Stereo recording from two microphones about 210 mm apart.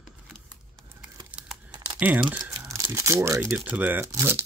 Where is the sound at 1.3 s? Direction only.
5° right (ahead or behind).